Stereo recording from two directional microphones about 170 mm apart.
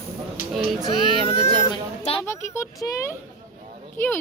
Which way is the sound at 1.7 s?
30° left (ahead or behind).